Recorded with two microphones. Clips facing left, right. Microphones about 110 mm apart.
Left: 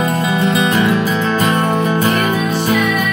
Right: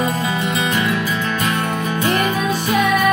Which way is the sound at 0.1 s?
30° left (ahead or behind).